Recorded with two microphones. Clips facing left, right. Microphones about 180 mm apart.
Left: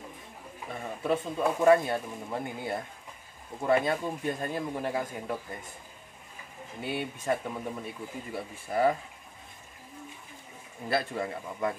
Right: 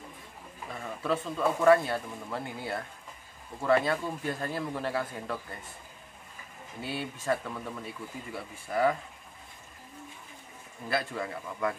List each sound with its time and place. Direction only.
0.7 s speech: 25° left (ahead or behind)
6.8 s speech: 20° left (ahead or behind)
10.9 s speech: 25° left (ahead or behind)